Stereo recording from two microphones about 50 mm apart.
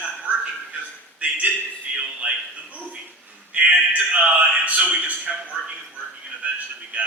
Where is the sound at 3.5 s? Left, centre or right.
Right.